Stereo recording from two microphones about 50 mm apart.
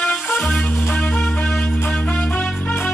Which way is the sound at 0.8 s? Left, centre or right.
Left.